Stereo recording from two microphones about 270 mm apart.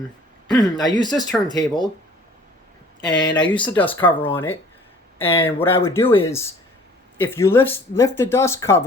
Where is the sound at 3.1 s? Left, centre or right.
Centre.